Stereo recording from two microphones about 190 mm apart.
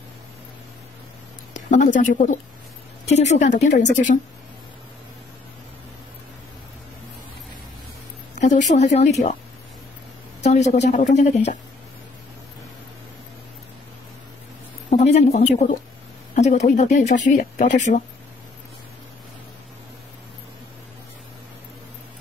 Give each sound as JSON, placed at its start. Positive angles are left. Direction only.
{"t": 1.5, "sound": "speech", "side_deg": 40}
{"t": 8.4, "sound": "speech", "side_deg": 40}
{"t": 10.4, "sound": "speech", "side_deg": 35}
{"t": 14.9, "sound": "speech", "side_deg": 35}